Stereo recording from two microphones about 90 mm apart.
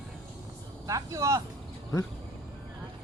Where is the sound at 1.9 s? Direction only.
40° left (ahead or behind).